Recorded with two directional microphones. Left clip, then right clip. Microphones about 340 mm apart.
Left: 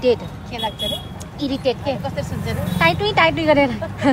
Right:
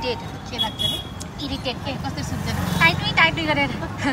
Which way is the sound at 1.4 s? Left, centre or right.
Centre.